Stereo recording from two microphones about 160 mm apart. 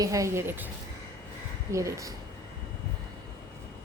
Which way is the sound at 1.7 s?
20° right (ahead or behind).